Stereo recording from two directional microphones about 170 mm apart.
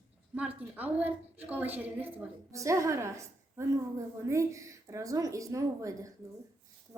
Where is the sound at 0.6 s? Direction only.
10° right (ahead or behind).